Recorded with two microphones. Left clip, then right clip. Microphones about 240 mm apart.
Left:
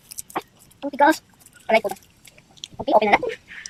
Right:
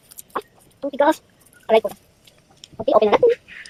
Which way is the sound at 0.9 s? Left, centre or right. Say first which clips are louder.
Left 1 dB; centre.